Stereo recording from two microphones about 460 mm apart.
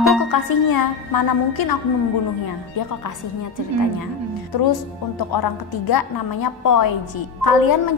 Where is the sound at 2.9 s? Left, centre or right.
Left.